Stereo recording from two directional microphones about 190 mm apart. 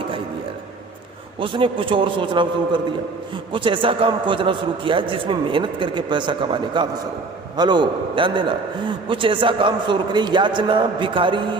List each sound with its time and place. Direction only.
1.4 s a man's voice: 25° right (ahead or behind)